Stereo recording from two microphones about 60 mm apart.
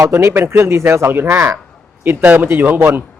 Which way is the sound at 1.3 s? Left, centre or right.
Right.